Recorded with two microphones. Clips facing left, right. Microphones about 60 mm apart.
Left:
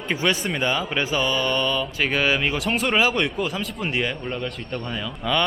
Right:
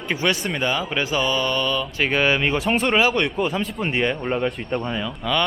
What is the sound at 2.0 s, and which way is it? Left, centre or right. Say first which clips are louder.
Speech: right 3 dB; centre.